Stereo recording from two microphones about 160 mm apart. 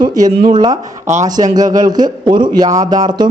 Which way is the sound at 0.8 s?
50° right (ahead or behind).